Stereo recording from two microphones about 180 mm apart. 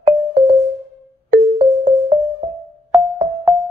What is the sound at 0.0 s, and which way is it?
Music, 40° right (ahead or behind).